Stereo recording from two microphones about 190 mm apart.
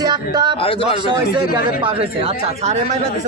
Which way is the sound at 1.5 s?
25° right (ahead or behind).